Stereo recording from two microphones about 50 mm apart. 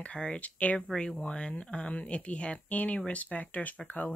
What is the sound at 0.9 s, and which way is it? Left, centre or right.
Speech, centre.